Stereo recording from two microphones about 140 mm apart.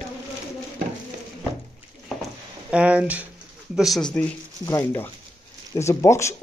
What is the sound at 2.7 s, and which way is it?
Speech, 10° right (ahead or behind).